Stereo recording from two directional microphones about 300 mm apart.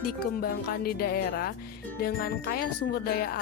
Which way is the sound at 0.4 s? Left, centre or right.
Left.